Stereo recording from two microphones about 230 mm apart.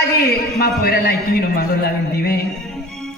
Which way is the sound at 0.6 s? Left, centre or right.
Left.